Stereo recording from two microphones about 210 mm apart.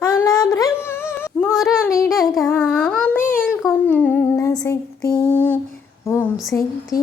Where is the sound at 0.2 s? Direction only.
15° left (ahead or behind).